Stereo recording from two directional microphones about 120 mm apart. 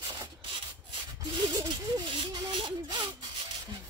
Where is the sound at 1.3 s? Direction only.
40° right (ahead or behind).